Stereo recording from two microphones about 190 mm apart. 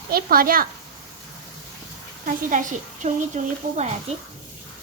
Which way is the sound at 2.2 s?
40° right (ahead or behind).